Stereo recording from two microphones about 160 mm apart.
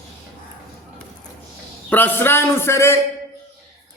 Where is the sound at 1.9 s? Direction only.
10° left (ahead or behind).